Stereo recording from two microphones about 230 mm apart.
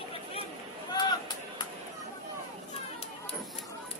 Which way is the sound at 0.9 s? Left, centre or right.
Centre.